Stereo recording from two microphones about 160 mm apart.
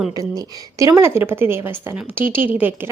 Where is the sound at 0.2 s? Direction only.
20° right (ahead or behind).